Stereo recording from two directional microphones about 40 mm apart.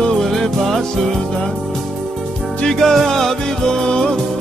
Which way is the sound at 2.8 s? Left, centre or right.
Centre.